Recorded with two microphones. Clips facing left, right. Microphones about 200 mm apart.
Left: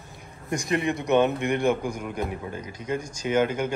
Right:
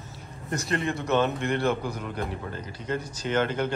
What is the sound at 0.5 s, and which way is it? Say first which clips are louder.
A man's voice: left 3 dB; 15° left (ahead or behind).